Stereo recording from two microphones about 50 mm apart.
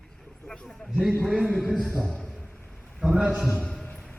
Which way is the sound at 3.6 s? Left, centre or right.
Centre.